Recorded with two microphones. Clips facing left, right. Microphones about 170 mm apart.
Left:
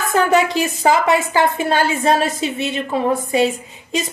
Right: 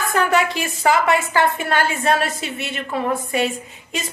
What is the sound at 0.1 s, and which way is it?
A woman's voice, 20° left (ahead or behind).